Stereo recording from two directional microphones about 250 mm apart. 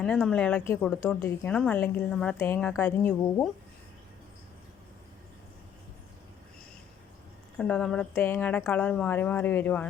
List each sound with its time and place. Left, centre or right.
0.0 s a woman's voice: centre
7.6 s a woman's voice: centre